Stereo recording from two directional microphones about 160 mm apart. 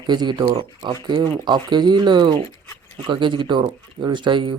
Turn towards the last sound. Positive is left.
turn(degrees=-30)  # may be behind; listen again after turning